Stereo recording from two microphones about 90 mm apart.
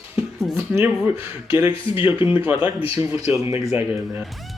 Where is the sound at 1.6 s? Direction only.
75° left (ahead or behind).